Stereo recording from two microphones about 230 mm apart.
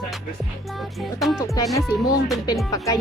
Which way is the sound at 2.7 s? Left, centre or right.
Centre.